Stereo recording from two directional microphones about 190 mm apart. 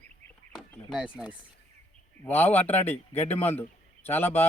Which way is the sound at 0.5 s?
5° right (ahead or behind).